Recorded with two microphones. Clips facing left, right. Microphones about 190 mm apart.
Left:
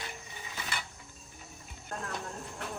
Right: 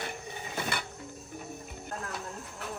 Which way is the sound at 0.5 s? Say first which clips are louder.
Right 7 dB; 55° right (ahead or behind).